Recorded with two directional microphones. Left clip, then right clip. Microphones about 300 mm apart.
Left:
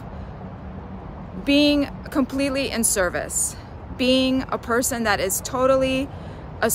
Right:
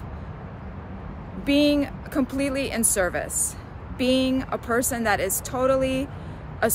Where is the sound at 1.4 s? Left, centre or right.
Centre.